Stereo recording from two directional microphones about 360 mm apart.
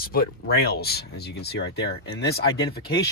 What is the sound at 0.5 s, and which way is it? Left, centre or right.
Speech, left.